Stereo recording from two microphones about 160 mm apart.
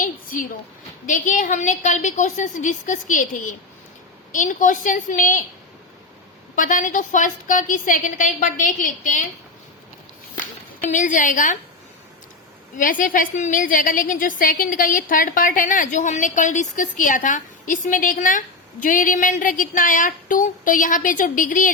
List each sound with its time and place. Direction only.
0.0 s a sound: 60° left (ahead or behind)
1.0 s a woman's voice: 55° left (ahead or behind)
4.3 s a woman's voice: 55° left (ahead or behind)
6.6 s a woman's voice: 55° left (ahead or behind)
10.3 s speech: 55° left (ahead or behind)
12.7 s a woman's voice: 55° left (ahead or behind)